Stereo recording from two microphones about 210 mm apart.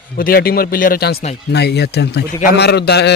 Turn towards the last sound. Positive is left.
turn(degrees=50)  # may be behind; listen again after turning